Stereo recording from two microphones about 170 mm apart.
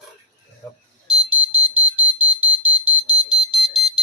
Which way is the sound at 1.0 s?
5° right (ahead or behind).